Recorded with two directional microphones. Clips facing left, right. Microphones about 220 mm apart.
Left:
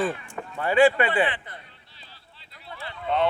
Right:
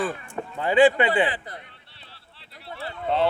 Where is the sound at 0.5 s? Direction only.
20° right (ahead or behind).